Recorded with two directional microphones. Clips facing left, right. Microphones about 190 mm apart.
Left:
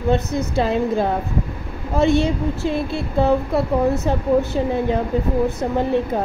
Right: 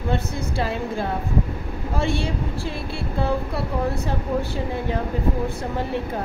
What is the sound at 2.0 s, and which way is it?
Child singing, 20° left (ahead or behind).